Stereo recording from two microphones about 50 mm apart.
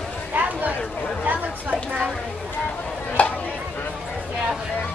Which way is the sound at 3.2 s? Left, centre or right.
Left.